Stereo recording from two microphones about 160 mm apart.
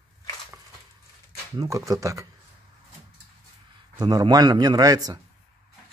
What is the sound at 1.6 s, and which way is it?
Speech, 20° right (ahead or behind).